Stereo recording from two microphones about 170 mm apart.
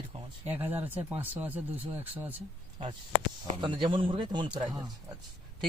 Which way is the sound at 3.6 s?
25° right (ahead or behind).